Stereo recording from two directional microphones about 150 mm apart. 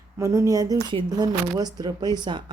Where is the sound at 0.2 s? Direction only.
20° right (ahead or behind).